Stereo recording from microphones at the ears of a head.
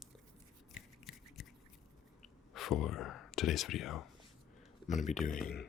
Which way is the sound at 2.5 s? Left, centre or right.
Left.